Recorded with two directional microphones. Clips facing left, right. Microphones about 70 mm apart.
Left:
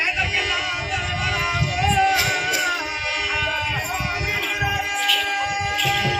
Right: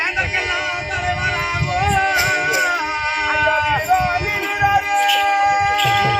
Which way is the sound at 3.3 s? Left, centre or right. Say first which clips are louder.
Right 10 dB; right.